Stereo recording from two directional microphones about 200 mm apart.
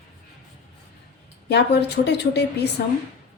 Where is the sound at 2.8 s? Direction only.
50° left (ahead or behind).